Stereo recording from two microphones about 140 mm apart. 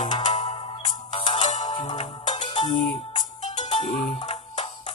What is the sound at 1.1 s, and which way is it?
Music, 35° left (ahead or behind).